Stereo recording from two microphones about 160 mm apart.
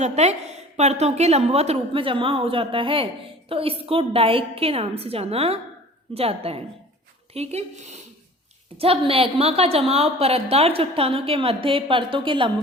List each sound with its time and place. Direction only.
0.0 s a woman's voice: 45° right (ahead or behind)